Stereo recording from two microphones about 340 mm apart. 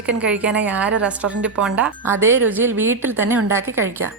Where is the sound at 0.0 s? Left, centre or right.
Centre.